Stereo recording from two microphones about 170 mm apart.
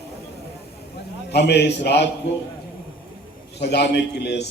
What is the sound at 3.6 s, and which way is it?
Speech, 75° left (ahead or behind).